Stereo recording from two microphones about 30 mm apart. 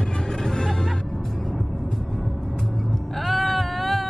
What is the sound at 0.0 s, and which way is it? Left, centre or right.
Music, left.